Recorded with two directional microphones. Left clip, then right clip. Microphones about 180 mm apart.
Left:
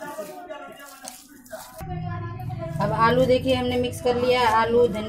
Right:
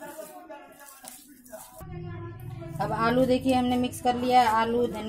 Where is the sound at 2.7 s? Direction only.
50° right (ahead or behind).